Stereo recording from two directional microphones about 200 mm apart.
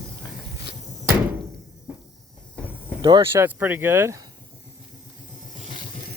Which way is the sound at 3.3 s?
10° right (ahead or behind).